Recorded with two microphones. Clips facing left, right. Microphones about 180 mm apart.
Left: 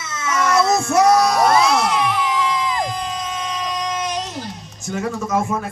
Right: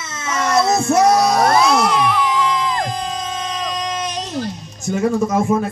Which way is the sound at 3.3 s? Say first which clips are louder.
Right 1 dB; 25° right (ahead or behind).